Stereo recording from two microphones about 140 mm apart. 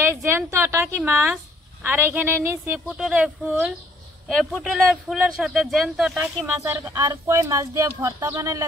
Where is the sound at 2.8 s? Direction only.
5° right (ahead or behind).